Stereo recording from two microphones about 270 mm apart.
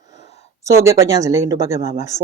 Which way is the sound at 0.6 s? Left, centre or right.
Centre.